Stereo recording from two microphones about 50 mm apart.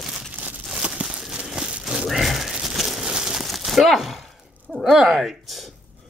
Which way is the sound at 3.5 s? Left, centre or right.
Centre.